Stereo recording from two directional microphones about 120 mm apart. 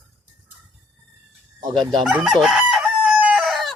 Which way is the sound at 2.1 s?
5° right (ahead or behind).